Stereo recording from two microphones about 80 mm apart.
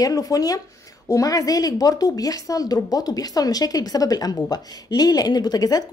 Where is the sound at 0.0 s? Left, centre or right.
Left.